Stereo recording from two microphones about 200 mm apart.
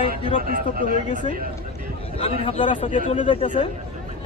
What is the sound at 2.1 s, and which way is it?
Speech, 30° left (ahead or behind).